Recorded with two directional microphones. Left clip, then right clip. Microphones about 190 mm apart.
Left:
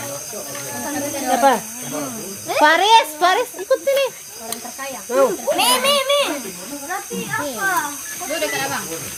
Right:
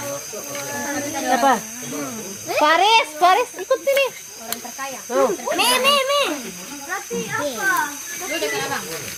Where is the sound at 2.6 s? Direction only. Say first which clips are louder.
Left 2 dB; 10° left (ahead or behind).